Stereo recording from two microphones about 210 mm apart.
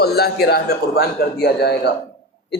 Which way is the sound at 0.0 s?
50° left (ahead or behind).